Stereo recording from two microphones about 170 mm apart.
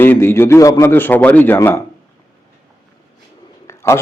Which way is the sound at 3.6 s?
15° left (ahead or behind).